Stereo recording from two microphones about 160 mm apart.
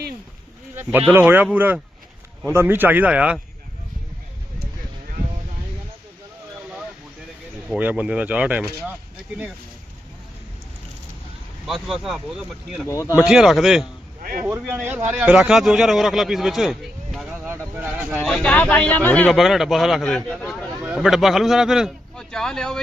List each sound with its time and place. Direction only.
0.8 s a man's voice: 10° right (ahead or behind)
7.7 s a man's voice: 10° right (ahead or behind)
11.6 s a man's voice: centre (ahead or behind)
12.9 s speech: 20° left (ahead or behind)
13.2 s a man's voice: centre (ahead or behind)
14.2 s a sound: 60° right (ahead or behind)
14.4 s a man's voice: 10° right (ahead or behind)
18.2 s a man's voice: 5° left (ahead or behind)